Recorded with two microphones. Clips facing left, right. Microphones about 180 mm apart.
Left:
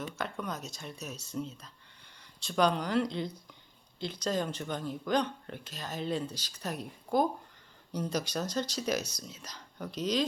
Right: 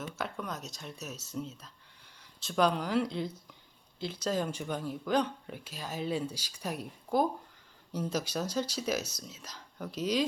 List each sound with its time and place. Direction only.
0.0 s speech: 5° right (ahead or behind)